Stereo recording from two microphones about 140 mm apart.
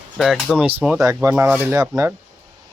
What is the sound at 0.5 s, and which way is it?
Speech, centre (ahead or behind).